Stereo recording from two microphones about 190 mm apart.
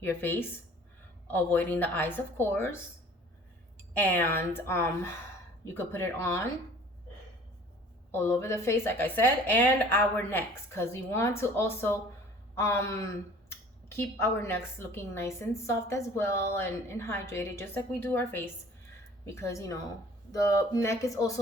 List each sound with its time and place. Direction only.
0.0 s speech: 10° left (ahead or behind)
3.9 s speech: 10° left (ahead or behind)
8.1 s speech: 15° left (ahead or behind)